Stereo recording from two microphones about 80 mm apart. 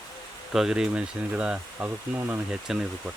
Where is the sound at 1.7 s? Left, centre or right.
Right.